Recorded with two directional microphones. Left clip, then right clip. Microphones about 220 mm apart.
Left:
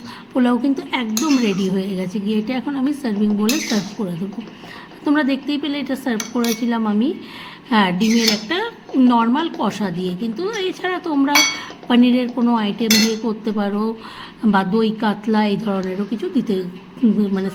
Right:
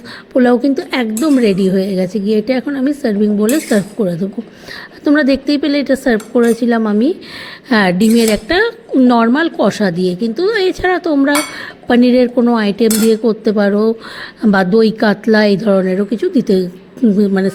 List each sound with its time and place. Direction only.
0.3 s a woman's voice: 20° right (ahead or behind)